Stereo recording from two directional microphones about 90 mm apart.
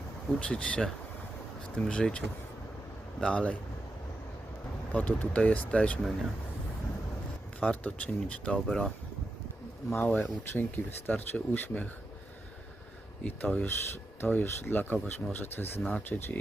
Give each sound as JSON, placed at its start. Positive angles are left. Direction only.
{"t": 0.3, "sound": "speech", "side_deg": 15}
{"t": 4.9, "sound": "speech", "side_deg": 15}
{"t": 7.6, "sound": "speech", "side_deg": 15}
{"t": 9.9, "sound": "speech", "side_deg": 20}
{"t": 13.2, "sound": "speech", "side_deg": 20}